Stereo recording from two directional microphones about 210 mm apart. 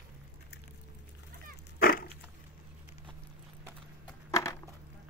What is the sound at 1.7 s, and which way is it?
Dog, 45° left (ahead or behind).